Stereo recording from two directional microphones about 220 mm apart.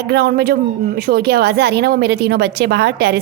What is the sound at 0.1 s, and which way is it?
A woman's voice, 45° right (ahead or behind).